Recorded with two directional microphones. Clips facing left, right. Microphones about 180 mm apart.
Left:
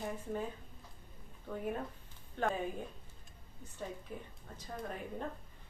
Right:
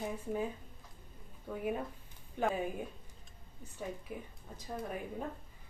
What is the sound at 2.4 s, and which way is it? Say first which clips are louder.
Speech: right 1 dB; 10° right (ahead or behind).